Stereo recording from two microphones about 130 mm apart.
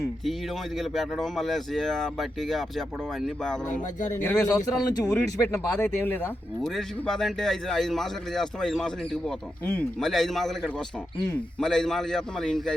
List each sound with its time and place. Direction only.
0.8 s speech: centre (ahead or behind)
4.4 s speech: 25° left (ahead or behind)
6.7 s speech: 5° left (ahead or behind)